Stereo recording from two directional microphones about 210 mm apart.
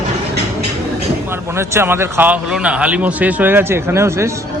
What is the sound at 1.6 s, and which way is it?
Speech, 10° right (ahead or behind).